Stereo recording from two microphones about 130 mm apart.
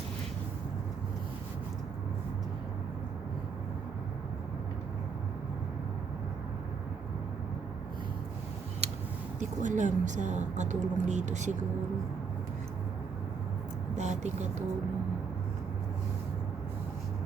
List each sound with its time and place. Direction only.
8.8 s a sound: 55° right (ahead or behind)
9.4 s speech: 70° right (ahead or behind)
13.9 s vehicle: 60° right (ahead or behind)